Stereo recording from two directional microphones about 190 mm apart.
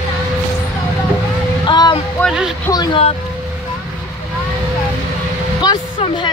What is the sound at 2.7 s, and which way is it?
Speech, 25° left (ahead or behind).